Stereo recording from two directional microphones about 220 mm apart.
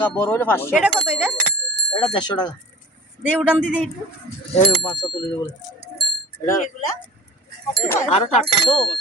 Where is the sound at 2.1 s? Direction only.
20° left (ahead or behind).